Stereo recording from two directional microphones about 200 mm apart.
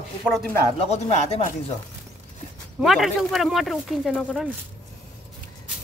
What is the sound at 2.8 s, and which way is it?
Speech, centre (ahead or behind).